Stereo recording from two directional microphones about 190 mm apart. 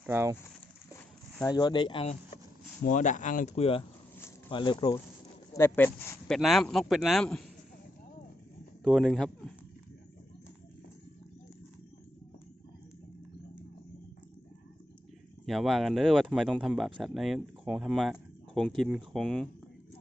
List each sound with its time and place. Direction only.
0.0 s speech: 10° right (ahead or behind)
0.9 s speech: 15° left (ahead or behind)
2.8 s speech: 40° left (ahead or behind); by 4.9 s 25° left (ahead or behind)
5.5 s speech: 10° left (ahead or behind)
8.8 s speech: centre (ahead or behind)
15.4 s speech: centre (ahead or behind)